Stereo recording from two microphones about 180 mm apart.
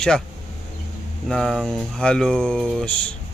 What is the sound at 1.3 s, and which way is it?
Speech, centre (ahead or behind).